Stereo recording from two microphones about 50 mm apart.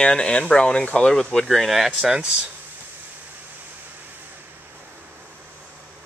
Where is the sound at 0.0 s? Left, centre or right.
Centre.